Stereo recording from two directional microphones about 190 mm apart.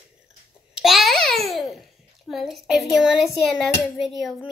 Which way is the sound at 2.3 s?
Centre (ahead or behind).